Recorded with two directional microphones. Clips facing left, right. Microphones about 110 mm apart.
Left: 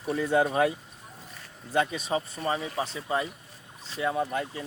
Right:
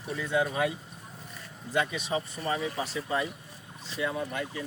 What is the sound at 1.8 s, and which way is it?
Speech, 35° left (ahead or behind).